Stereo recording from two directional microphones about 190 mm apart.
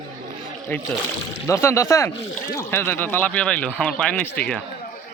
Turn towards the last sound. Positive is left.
turn(degrees=5)  # may be behind; listen again after turning